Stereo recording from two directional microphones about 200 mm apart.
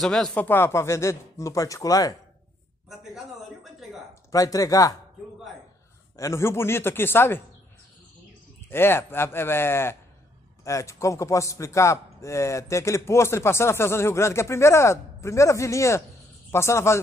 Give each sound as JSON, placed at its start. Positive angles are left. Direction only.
{"t": 0.0, "sound": "a man's voice", "side_deg": 5}
{"t": 2.9, "sound": "a man's voice", "side_deg": 0}
{"t": 4.1, "sound": "speech", "side_deg": 15}
{"t": 6.1, "sound": "a man's voice", "side_deg": 15}
{"t": 8.6, "sound": "a man's voice", "side_deg": 10}